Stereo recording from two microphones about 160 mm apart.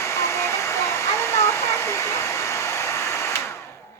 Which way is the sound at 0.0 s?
15° left (ahead or behind).